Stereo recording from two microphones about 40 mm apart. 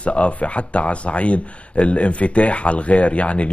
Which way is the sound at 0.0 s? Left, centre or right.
Left.